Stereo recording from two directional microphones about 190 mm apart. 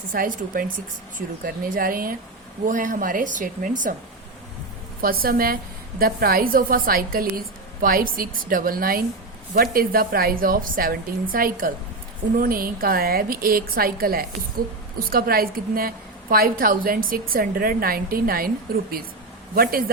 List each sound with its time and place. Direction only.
0.1 s a woman's voice: 45° right (ahead or behind)
4.9 s a woman's voice: 50° right (ahead or behind)